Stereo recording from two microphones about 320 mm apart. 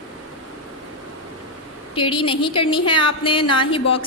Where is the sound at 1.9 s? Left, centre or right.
Centre.